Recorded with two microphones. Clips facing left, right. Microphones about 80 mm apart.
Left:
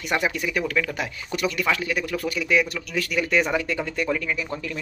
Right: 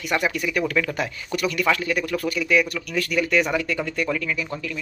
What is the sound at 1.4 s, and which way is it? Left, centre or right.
Speech, centre.